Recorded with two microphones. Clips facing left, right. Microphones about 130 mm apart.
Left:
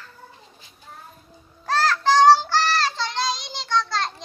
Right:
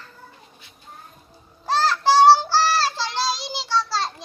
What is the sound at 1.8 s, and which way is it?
Child singing, 10° right (ahead or behind).